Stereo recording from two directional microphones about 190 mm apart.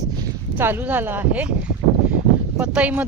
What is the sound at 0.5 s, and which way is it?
Speech, 10° right (ahead or behind).